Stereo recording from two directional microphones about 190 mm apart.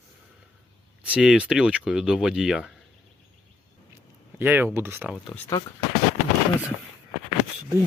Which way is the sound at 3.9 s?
10° right (ahead or behind).